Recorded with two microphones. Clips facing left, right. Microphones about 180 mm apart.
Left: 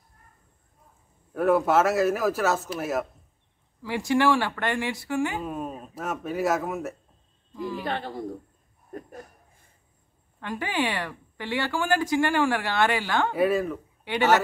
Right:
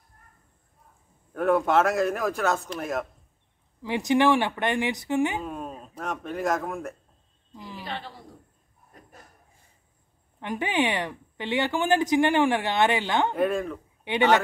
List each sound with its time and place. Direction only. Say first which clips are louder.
1.3 s a man's voice: left 1 dB; 5° left (ahead or behind)
3.8 s speech: right 1 dB; 20° right (ahead or behind)
5.4 s a man's voice: left 2 dB; 5° left (ahead or behind)
7.8 s a woman's voice: left 6 dB; 50° left (ahead or behind)
10.4 s speech: right 2 dB; 20° right (ahead or behind)
13.3 s a man's voice: left 2 dB; 5° left (ahead or behind)
14.0 s speech: even; 20° right (ahead or behind)